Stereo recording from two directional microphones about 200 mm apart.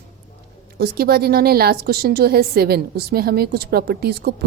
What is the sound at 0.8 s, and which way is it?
A woman's voice, 50° right (ahead or behind).